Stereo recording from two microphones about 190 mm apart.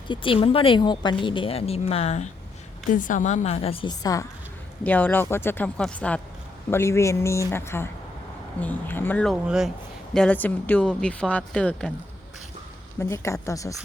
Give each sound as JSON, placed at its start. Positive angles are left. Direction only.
{"t": 0.1, "sound": "a woman's voice", "side_deg": 25}
{"t": 4.8, "sound": "speech", "side_deg": 10}
{"t": 9.3, "sound": "speech", "side_deg": -5}
{"t": 10.2, "sound": "speech", "side_deg": 10}
{"t": 13.0, "sound": "speech", "side_deg": 15}